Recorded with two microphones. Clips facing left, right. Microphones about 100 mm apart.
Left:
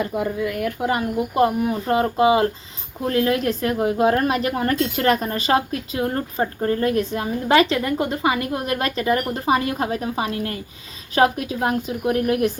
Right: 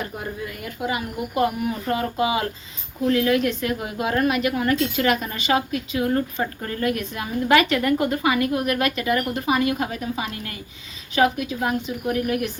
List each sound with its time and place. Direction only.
0.4 s a woman's voice: 65° left (ahead or behind); by 1.0 s 50° left (ahead or behind)
1.4 s a woman's voice: 30° left (ahead or behind)